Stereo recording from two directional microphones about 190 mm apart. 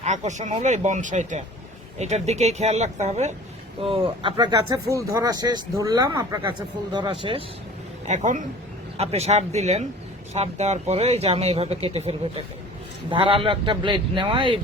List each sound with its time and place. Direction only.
0.0 s speech: 40° right (ahead or behind)
8.0 s speech: 40° right (ahead or behind)